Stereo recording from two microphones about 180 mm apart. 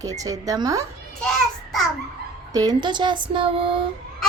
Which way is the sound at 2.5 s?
25° right (ahead or behind).